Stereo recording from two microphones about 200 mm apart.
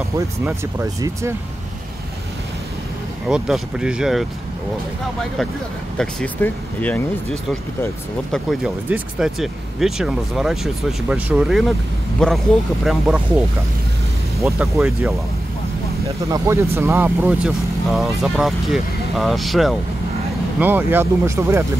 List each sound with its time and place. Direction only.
3.3 s speech: 5° right (ahead or behind)
5.9 s speech: 5° left (ahead or behind)
14.6 s speech: centre (ahead or behind)
16.3 s speech: 15° right (ahead or behind)